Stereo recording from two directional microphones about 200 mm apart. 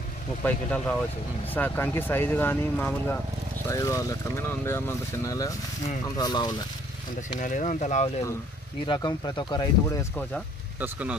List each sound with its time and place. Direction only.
0.4 s speech: 5° left (ahead or behind)
7.2 s speech: 40° left (ahead or behind)
8.8 s speech: 20° left (ahead or behind)
10.8 s speech: 5° right (ahead or behind)